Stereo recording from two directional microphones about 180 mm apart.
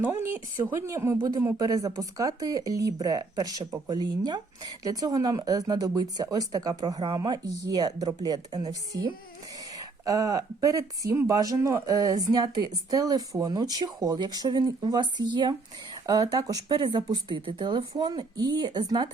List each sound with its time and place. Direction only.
0.0 s speech: 15° right (ahead or behind)